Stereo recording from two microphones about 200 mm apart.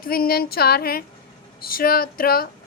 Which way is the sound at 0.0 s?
45° left (ahead or behind).